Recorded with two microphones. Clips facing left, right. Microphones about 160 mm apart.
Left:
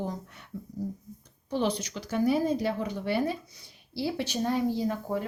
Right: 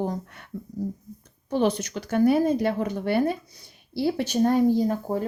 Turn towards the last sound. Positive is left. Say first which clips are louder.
# right 6 dB
turn(degrees=-40)  # may be behind; listen again after turning